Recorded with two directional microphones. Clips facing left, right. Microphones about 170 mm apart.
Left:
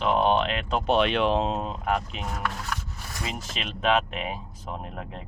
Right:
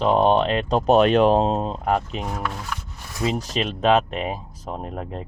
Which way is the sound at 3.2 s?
35° right (ahead or behind).